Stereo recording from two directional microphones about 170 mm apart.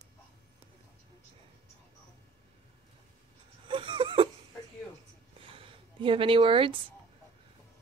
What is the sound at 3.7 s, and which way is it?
Whimper, 30° right (ahead or behind).